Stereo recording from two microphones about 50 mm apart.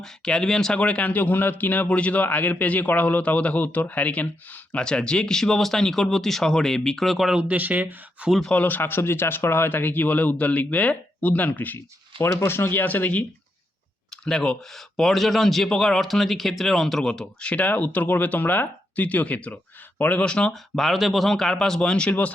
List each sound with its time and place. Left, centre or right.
0.0 s speech: centre
0.8 s a man's voice: left
4.8 s speech: centre
7.4 s speech: right
8.6 s a man's voice: left
12.2 s speech: left
14.3 s speech: centre
17.5 s a man's voice: left
20.2 s speech: centre
20.5 s speech: centre